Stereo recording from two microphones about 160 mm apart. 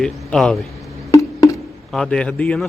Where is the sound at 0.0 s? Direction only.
5° left (ahead or behind).